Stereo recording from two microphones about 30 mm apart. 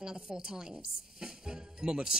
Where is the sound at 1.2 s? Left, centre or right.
Right.